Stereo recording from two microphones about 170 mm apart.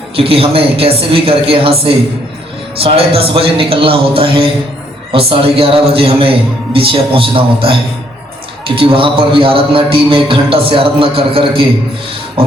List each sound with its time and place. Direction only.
0.2 s a man's voice: 35° right (ahead or behind)